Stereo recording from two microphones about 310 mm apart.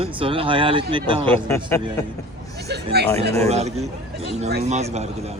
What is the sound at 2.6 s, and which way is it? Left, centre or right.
Speech, right.